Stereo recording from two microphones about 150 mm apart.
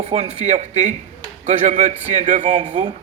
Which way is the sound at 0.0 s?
45° right (ahead or behind).